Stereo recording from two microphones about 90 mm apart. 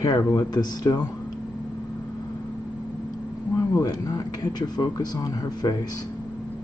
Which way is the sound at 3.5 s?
40° left (ahead or behind).